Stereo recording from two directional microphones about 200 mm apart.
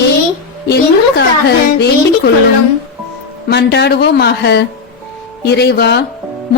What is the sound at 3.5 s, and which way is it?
A woman's voice, 55° left (ahead or behind).